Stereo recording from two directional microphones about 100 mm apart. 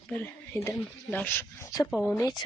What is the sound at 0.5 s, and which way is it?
Speech, 30° left (ahead or behind).